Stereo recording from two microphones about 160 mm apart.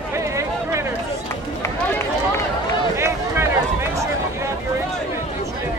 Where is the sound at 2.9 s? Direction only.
15° right (ahead or behind).